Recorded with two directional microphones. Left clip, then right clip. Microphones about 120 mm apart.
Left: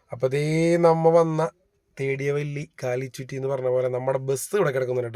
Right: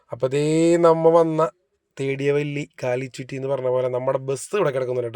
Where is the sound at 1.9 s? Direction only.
30° right (ahead or behind).